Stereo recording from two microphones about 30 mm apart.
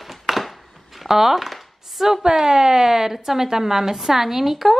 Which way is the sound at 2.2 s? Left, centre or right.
Right.